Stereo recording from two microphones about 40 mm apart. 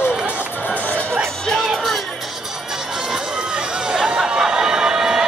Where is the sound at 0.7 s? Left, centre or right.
Left.